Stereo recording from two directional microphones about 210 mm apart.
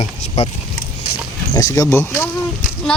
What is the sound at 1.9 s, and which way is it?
Mantra, 15° left (ahead or behind).